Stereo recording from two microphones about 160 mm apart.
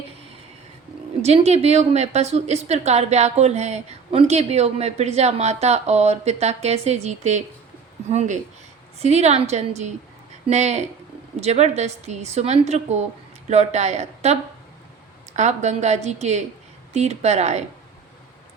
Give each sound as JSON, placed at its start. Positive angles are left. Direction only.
{"t": 1.2, "sound": "a woman's voice", "side_deg": -40}